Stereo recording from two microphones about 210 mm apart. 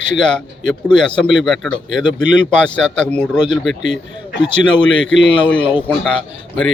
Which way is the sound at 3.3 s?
20° left (ahead or behind).